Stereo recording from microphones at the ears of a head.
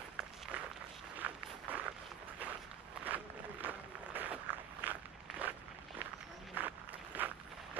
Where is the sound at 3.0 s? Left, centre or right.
Right.